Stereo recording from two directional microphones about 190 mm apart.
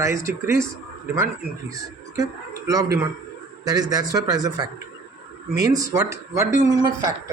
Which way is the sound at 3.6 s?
20° right (ahead or behind).